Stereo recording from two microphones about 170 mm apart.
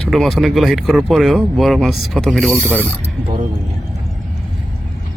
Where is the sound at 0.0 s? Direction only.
Centre (ahead or behind).